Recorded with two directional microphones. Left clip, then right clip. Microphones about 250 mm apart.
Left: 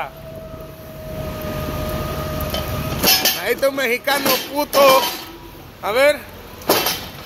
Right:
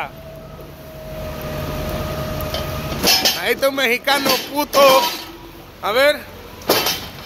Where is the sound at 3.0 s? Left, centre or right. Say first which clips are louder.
Right 1 dB; left.